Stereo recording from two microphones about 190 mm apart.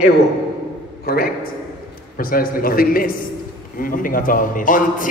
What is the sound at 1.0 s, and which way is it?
A man's voice, 55° left (ahead or behind).